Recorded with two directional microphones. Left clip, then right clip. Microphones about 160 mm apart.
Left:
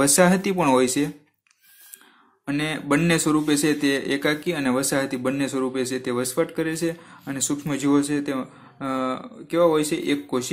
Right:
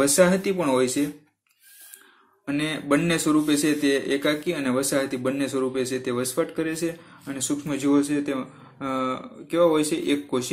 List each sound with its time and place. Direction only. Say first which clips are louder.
0.0 s speech: left 1 dB; 40° left (ahead or behind)
2.4 s speech: left 1 dB; 30° left (ahead or behind)